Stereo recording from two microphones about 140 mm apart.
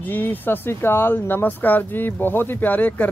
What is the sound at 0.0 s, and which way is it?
Speech, 15° left (ahead or behind).